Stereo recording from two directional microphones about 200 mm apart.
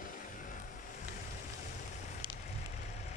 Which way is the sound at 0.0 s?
40° left (ahead or behind).